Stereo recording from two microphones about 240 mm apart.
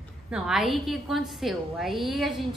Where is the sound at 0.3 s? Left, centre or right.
Centre.